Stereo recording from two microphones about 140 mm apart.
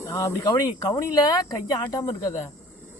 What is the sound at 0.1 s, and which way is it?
Speech, 20° left (ahead or behind).